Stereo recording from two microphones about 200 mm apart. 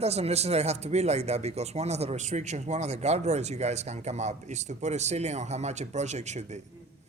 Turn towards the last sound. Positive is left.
turn(degrees=-35)  # may be behind; listen again after turning